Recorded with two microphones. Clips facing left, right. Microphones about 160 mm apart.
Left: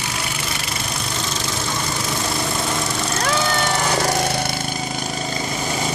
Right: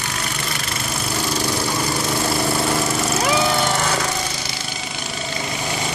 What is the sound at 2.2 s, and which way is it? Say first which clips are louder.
Vehicle: right 4 dB; 5° right (ahead or behind).